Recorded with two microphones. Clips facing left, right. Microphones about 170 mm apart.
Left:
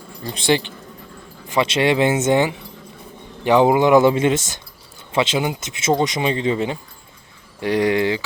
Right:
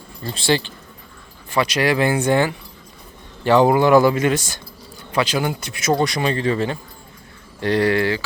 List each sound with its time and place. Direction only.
0.2 s speech: 15° left (ahead or behind)